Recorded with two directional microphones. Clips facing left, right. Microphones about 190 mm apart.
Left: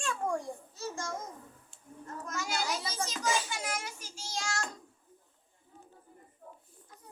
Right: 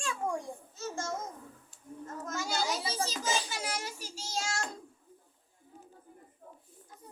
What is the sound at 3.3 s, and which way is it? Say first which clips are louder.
Child singing: even; 35° right (ahead or behind).